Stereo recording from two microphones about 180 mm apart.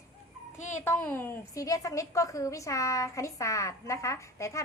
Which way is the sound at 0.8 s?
10° left (ahead or behind).